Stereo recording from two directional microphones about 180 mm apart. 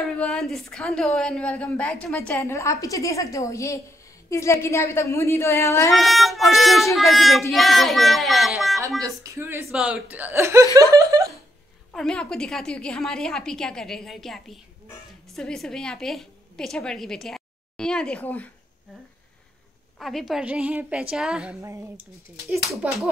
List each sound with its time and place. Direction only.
0.2 s a woman's voice: 5° left (ahead or behind)
5.9 s a woman's voice: centre (ahead or behind)
9.0 s speech: 15° right (ahead or behind)
11.9 s a woman's voice: 5° left (ahead or behind)
20.0 s a woman's voice: centre (ahead or behind)
21.5 s speech: 15° right (ahead or behind)
22.5 s a woman's voice: centre (ahead or behind)